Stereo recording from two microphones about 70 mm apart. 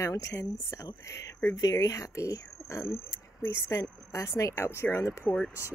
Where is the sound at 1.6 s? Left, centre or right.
Left.